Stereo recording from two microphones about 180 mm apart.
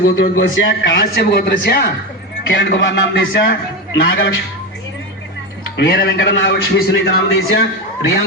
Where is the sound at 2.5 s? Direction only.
90° left.